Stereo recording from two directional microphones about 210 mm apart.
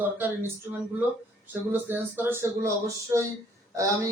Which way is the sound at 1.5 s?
10° right (ahead or behind).